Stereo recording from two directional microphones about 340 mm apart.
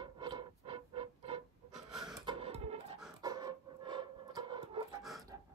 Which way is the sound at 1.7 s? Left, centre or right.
Centre.